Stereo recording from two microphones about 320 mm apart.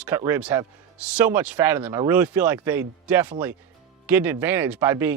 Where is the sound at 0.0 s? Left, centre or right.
Centre.